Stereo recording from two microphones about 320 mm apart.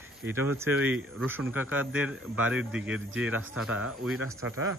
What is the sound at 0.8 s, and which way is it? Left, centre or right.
Speech, centre.